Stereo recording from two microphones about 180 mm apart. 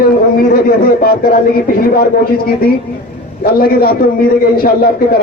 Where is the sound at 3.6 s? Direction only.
60° left (ahead or behind).